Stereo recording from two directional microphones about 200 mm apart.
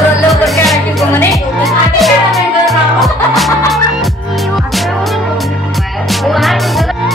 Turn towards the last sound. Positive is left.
turn(degrees=0)  # may be behind; listen again after turning